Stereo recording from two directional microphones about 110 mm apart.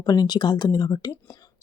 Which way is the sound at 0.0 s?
35° left (ahead or behind).